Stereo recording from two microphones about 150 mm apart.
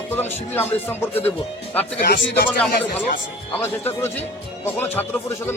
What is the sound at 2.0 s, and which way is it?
Speech, 90° left.